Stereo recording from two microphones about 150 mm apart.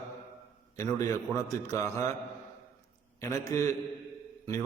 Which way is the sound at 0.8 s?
20° left (ahead or behind).